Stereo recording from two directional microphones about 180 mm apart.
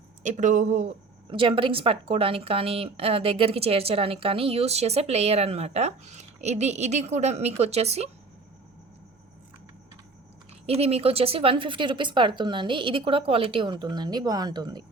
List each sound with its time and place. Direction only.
0.2 s speech: 45° right (ahead or behind)
1.3 s a woman's voice: 30° right (ahead or behind)
10.7 s speech: 35° right (ahead or behind)